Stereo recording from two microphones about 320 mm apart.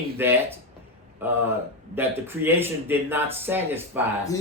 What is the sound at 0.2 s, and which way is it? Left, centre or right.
A man's voice, centre.